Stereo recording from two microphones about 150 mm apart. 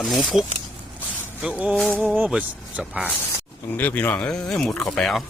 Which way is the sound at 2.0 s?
5° right (ahead or behind).